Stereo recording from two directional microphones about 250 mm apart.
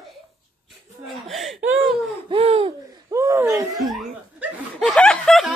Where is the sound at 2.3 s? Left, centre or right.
Right.